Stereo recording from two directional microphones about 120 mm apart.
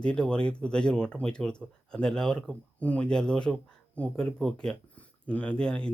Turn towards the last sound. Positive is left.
turn(degrees=10)  # may be behind; listen again after turning